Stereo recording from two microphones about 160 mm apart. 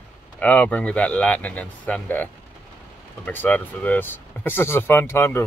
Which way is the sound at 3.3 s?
10° left (ahead or behind).